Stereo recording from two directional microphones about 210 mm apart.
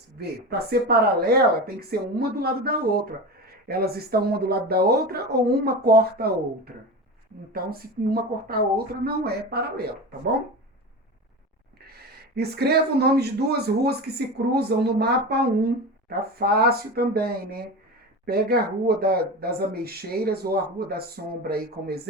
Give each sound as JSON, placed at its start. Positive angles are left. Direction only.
{"t": 0.7, "sound": "speech", "side_deg": -50}
{"t": 12.4, "sound": "speech", "side_deg": -50}